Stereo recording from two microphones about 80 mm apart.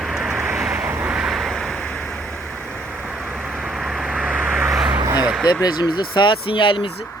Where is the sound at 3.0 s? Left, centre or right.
Centre.